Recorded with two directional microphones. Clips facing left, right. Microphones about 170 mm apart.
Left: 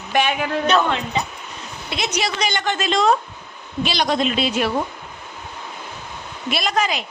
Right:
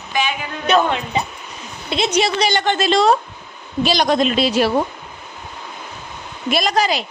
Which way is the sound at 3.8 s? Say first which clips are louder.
Right 4 dB; 45° right (ahead or behind).